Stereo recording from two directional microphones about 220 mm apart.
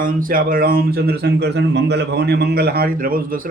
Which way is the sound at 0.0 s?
40° right (ahead or behind).